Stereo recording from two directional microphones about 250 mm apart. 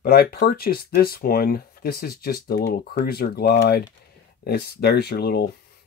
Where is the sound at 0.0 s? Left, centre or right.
Left.